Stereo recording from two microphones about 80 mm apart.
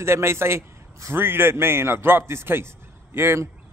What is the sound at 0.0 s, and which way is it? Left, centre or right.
A man's voice, right.